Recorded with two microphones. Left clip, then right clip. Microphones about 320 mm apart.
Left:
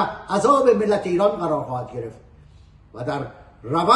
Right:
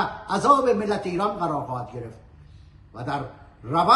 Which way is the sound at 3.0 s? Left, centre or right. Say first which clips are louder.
Left 3 dB; centre.